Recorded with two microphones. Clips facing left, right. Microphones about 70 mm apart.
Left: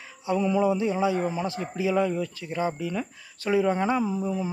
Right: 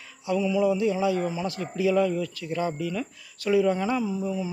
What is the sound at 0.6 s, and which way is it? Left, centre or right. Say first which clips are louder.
A man's voice: even; left.